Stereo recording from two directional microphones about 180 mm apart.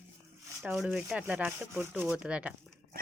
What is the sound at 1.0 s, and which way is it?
Rub, 10° right (ahead or behind).